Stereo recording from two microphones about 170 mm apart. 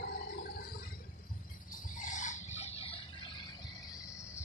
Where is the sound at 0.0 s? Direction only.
60° left (ahead or behind).